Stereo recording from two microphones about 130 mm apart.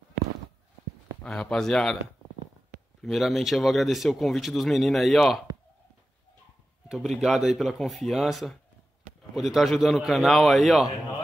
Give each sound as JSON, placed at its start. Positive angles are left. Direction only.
{"t": 1.2, "sound": "speech", "side_deg": 5}
{"t": 3.0, "sound": "speech", "side_deg": 0}
{"t": 7.2, "sound": "speech", "side_deg": -5}